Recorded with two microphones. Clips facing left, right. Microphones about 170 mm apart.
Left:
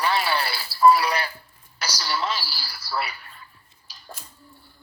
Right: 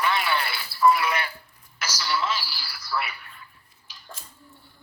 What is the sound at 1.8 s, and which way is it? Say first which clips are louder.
Telephone: even; 35° left (ahead or behind).